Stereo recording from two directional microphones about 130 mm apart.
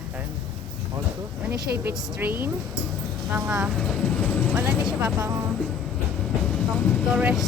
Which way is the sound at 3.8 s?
5° left (ahead or behind).